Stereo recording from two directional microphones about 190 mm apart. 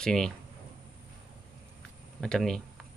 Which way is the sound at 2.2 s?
5° left (ahead or behind).